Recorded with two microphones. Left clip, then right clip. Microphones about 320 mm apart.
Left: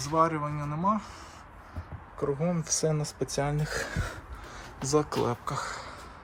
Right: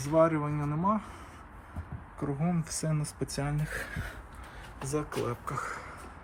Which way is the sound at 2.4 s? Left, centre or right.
Centre.